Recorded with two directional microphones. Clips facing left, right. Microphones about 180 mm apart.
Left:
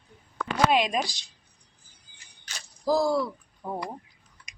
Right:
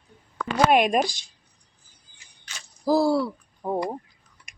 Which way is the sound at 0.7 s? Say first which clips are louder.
Right 5 dB; 55° right (ahead or behind).